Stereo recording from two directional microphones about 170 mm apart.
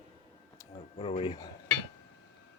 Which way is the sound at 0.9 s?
35° left (ahead or behind).